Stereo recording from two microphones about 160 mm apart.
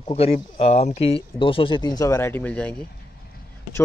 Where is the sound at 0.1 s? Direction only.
40° left (ahead or behind); by 2.7 s 10° left (ahead or behind).